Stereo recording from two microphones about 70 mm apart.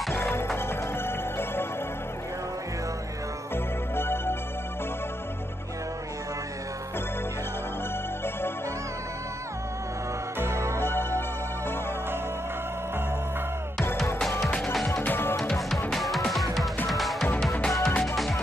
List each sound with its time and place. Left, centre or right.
0.6 s music: left
3.5 s music: left
10.4 s music: right
10.8 s music: left
14.2 s music: centre
15.0 s music: left
15.9 s music: centre